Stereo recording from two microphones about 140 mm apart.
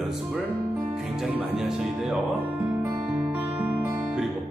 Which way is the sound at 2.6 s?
15° right (ahead or behind).